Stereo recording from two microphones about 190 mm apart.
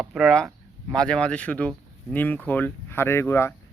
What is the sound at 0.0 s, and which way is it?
Speech, centre (ahead or behind).